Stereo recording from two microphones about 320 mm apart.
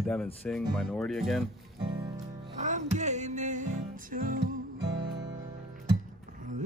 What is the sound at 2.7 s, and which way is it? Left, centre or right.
Music, right.